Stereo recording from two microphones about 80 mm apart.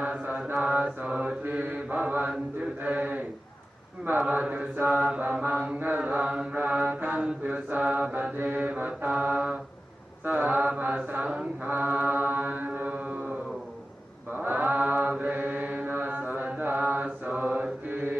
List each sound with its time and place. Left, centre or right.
0.0 s mantra: centre
2.8 s speech: right
4.3 s mantra: centre
4.8 s mantra: centre
5.2 s mantra: right
7.1 s mantra: centre
7.4 s mantra: centre
9.2 s a sound: centre
10.2 s mantra: right